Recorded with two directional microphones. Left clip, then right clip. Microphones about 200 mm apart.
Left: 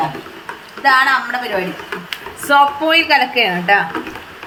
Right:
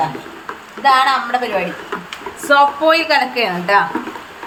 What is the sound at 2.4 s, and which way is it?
A woman's voice, centre (ahead or behind).